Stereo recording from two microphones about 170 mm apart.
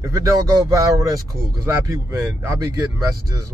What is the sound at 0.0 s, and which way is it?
Speech, 20° right (ahead or behind).